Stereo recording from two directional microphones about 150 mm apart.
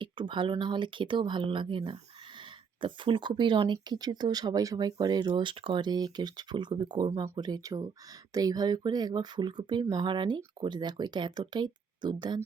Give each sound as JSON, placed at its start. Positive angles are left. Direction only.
{"t": 0.0, "sound": "speech", "side_deg": -35}